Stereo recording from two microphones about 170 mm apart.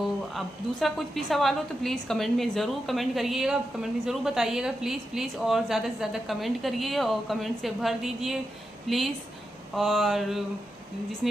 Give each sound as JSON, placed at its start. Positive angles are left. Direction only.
{"t": 0.3, "sound": "a woman's voice", "side_deg": 0}